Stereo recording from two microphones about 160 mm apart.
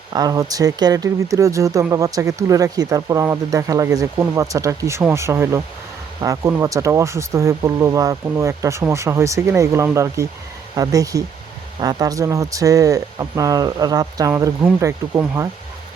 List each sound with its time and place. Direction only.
0.1 s speech: 25° right (ahead or behind)